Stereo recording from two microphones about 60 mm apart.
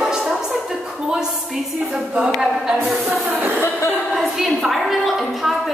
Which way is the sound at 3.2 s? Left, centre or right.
Right.